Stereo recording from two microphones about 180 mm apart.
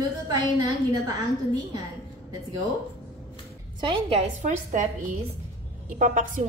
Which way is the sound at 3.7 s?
30° right (ahead or behind).